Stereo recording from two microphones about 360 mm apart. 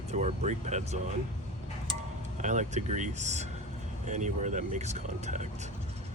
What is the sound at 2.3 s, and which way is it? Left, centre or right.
Speech, centre.